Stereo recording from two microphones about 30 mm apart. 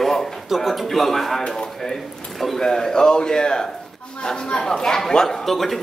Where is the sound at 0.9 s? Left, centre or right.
Centre.